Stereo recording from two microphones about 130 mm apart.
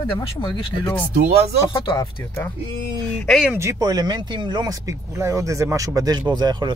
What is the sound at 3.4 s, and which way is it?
Speech, 20° right (ahead or behind).